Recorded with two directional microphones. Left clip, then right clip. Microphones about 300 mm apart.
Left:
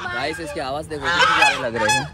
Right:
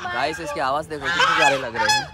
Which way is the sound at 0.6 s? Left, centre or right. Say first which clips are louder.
Right 3 dB; centre.